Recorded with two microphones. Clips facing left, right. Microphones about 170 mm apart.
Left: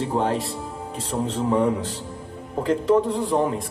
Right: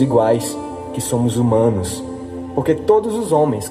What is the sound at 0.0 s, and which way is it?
A man's voice, 80° right.